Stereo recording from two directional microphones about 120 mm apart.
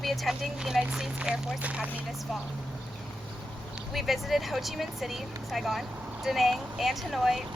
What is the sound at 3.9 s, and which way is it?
A woman's voice, centre (ahead or behind).